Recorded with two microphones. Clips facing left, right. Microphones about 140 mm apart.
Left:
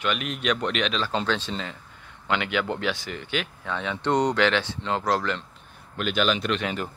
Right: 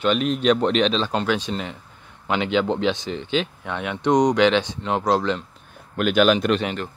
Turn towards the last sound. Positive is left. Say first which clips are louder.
# right 7 dB
turn(degrees=-50)  # may be behind; listen again after turning